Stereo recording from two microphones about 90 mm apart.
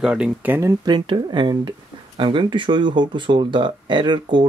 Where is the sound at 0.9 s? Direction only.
55° right (ahead or behind).